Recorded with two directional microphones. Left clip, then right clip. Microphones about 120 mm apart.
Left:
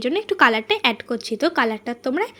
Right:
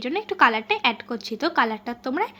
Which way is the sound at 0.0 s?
30° left (ahead or behind).